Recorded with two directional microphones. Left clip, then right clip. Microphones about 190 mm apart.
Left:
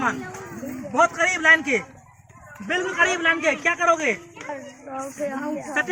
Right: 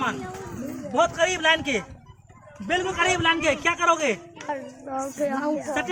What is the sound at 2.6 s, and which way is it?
A man's voice, 60° right (ahead or behind).